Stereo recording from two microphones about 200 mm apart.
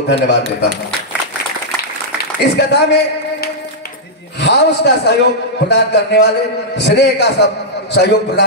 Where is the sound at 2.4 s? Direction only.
55° left (ahead or behind).